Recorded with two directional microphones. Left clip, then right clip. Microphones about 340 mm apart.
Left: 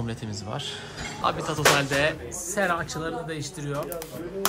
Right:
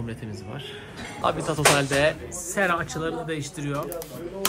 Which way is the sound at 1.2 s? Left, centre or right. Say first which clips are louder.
Right 1 dB; centre.